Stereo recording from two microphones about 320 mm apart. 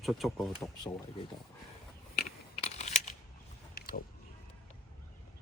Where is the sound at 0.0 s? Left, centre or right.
Centre.